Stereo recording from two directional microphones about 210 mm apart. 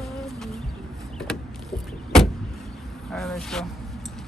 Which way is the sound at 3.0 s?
5° left (ahead or behind).